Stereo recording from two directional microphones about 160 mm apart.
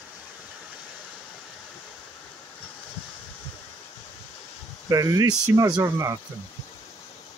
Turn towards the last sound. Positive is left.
turn(degrees=-20)  # may be behind; listen again after turning